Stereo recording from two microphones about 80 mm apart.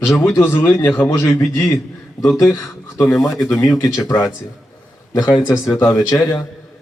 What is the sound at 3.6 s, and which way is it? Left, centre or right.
Speech, left.